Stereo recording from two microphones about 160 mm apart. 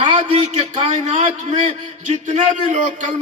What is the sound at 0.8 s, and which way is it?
A man's voice, 45° right (ahead or behind).